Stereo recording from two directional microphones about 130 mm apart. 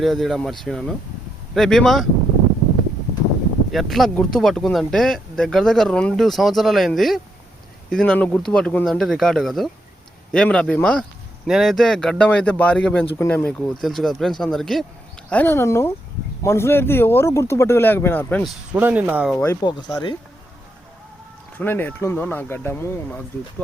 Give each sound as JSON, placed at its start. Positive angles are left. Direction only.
{"t": 0.0, "sound": "speech", "side_deg": 0}
{"t": 3.7, "sound": "speech", "side_deg": 0}
{"t": 11.4, "sound": "speech", "side_deg": 0}
{"t": 15.3, "sound": "speech", "side_deg": 15}
{"t": 18.4, "sound": "speech", "side_deg": -10}
{"t": 19.6, "sound": "speech", "side_deg": 30}
{"t": 21.6, "sound": "speech", "side_deg": 15}